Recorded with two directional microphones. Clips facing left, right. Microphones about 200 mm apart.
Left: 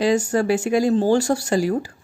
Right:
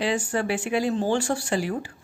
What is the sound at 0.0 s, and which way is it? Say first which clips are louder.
Speech: left 7 dB; 40° left (ahead or behind).